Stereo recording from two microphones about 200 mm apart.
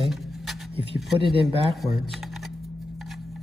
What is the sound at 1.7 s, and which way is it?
Speech, centre (ahead or behind).